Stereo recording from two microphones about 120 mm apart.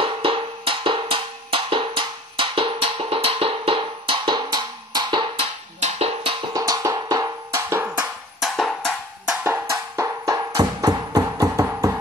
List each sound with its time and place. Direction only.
0.0 s music: 45° right (ahead or behind)
5.8 s music: 60° right (ahead or behind)
6.5 s music: 30° right (ahead or behind)
7.7 s music: 15° right (ahead or behind)
8.4 s drum: centre (ahead or behind)
9.4 s music: 20° right (ahead or behind)